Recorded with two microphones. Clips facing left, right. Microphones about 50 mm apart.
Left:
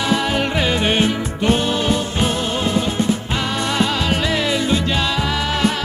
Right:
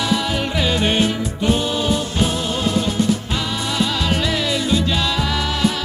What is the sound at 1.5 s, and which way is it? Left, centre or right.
Music, left.